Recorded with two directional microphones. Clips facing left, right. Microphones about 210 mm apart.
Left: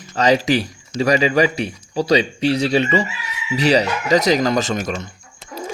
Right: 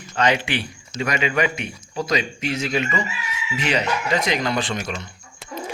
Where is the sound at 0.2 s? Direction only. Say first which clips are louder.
Left 5 dB; 40° left (ahead or behind).